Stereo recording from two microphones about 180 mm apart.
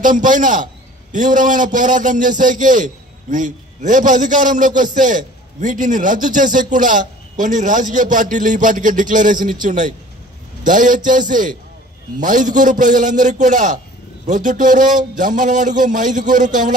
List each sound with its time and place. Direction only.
0.0 s a man's voice: 45° right (ahead or behind)